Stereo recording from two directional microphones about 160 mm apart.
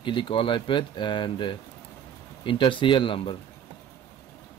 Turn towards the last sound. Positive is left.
turn(degrees=35)  # may be behind; listen again after turning